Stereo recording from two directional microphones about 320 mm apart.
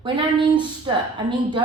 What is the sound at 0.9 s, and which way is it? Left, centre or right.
Speech, centre.